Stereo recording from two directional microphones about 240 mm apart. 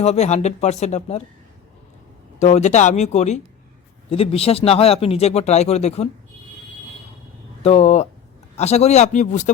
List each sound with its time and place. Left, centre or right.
0.0 s speech: left
2.4 s speech: left
7.6 s speech: left